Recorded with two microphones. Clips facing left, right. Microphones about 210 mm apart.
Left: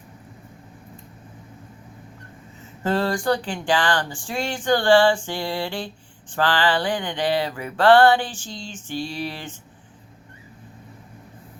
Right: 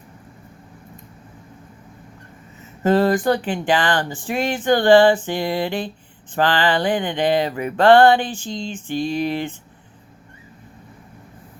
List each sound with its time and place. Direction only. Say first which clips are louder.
2.8 s speech: right 6 dB; 20° right (ahead or behind)